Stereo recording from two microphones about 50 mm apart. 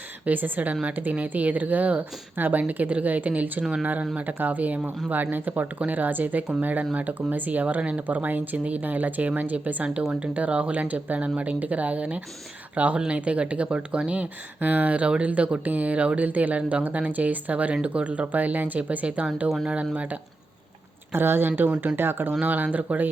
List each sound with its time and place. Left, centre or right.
0.3 s speech: right
10.0 s speech: right
21.1 s speech: right
22.3 s speech: right